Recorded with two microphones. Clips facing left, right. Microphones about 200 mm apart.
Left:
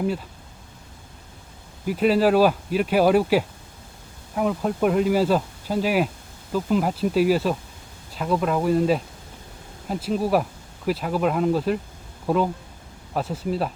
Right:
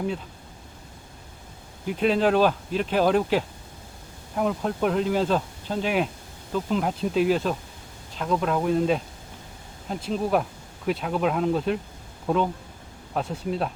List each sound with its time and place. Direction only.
1.9 s speech: 5° left (ahead or behind)